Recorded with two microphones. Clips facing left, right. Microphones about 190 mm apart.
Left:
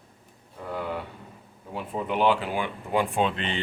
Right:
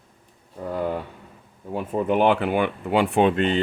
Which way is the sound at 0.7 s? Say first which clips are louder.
Right 5 dB; 45° right (ahead or behind).